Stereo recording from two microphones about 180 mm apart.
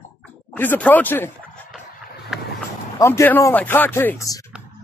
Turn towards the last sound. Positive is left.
turn(degrees=15)  # may be behind; listen again after turning